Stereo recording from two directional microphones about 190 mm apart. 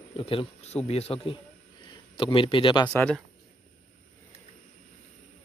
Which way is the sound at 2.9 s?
5° left (ahead or behind).